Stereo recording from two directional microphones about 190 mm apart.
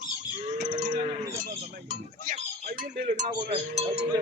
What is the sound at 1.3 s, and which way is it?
Dishes, 50° right (ahead or behind).